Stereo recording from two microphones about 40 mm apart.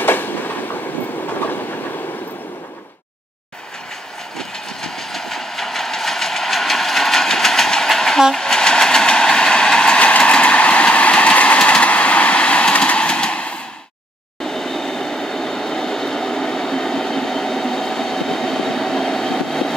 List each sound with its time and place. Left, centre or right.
0.0 s train: left
4.4 s train: centre
9.9 s train: left
14.4 s train: centre